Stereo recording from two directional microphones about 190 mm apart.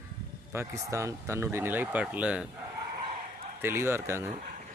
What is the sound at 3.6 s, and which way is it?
Speech, 10° right (ahead or behind).